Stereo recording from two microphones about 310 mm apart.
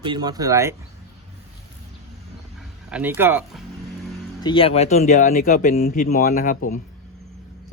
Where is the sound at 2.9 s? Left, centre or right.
Centre.